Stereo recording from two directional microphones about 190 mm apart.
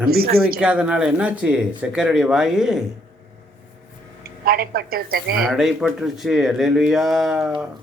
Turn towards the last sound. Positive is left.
turn(degrees=-5)  # may be behind; listen again after turning